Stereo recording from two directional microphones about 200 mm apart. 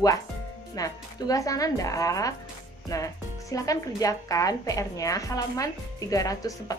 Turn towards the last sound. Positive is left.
turn(degrees=15)  # may be behind; listen again after turning